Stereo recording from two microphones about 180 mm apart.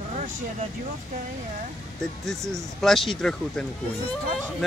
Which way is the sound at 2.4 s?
15° right (ahead or behind).